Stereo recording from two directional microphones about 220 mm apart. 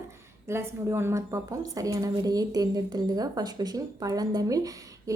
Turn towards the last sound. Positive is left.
turn(degrees=-15)  # may be behind; listen again after turning